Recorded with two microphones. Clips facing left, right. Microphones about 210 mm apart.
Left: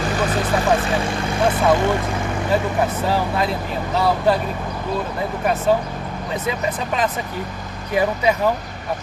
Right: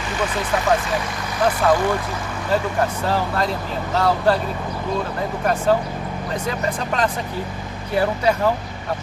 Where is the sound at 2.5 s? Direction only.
10° left (ahead or behind).